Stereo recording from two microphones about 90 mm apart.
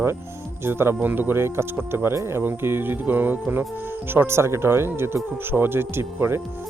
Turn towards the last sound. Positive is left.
turn(degrees=-25)  # may be behind; listen again after turning